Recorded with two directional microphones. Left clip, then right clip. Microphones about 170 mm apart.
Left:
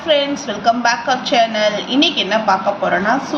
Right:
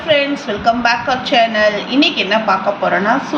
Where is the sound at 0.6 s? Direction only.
10° left (ahead or behind).